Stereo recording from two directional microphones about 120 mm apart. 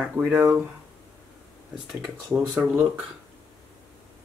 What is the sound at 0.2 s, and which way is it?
Speech, 30° right (ahead or behind).